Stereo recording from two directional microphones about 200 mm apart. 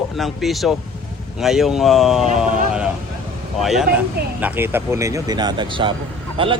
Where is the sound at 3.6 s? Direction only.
Centre (ahead or behind).